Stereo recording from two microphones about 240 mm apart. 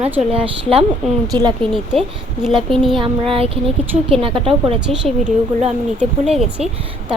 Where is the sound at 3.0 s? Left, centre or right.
Right.